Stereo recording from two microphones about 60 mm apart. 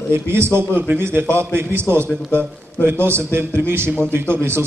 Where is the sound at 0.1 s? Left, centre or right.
Right.